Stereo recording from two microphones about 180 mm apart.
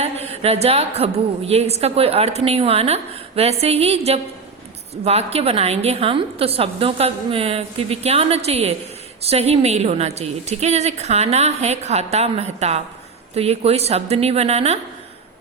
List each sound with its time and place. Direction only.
0.0 s a woman's voice: 35° right (ahead or behind)